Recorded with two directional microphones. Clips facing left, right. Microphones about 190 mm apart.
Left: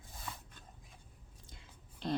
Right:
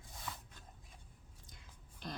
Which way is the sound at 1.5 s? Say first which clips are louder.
Left 3 dB; 25° left (ahead or behind).